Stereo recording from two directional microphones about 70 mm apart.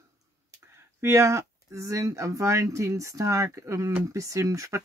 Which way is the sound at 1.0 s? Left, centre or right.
Right.